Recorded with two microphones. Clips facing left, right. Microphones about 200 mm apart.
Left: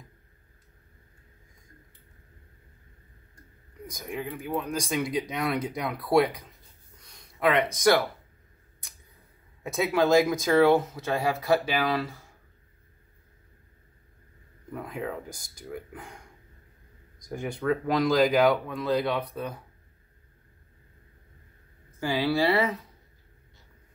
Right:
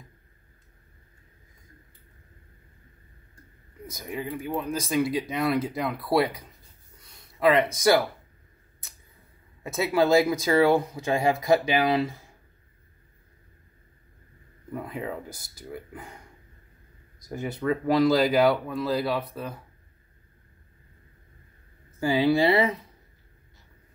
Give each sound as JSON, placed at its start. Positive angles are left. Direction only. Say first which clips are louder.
{"t": 3.8, "sound": "speech", "louder": "right 1 dB", "side_deg": -5}
{"t": 9.6, "sound": "speech", "louder": "right 1 dB", "side_deg": 0}
{"t": 14.7, "sound": "speech", "louder": "right 1 dB", "side_deg": -5}
{"t": 22.3, "sound": "speech", "louder": "right 2 dB", "side_deg": -20}